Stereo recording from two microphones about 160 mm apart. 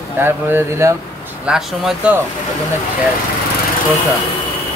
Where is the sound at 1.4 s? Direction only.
5° right (ahead or behind).